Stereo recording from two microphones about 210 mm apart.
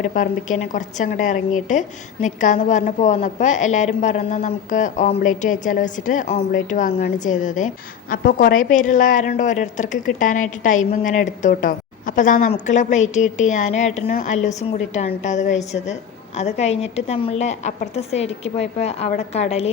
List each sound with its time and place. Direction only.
0.0 s a woman's voice: 40° left (ahead or behind)